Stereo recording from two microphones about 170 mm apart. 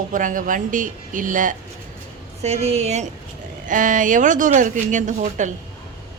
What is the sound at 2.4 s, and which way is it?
A woman's voice, 40° right (ahead or behind).